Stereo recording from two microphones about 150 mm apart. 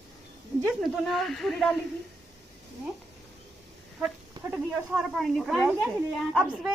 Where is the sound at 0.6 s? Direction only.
Centre (ahead or behind).